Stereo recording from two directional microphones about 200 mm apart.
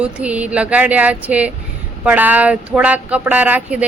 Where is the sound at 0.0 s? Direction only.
5° right (ahead or behind).